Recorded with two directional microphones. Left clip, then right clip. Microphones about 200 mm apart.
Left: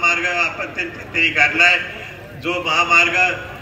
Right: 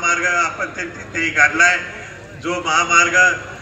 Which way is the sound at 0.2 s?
50° left (ahead or behind).